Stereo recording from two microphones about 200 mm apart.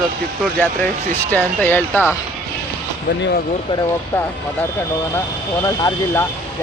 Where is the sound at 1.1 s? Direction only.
10° left (ahead or behind).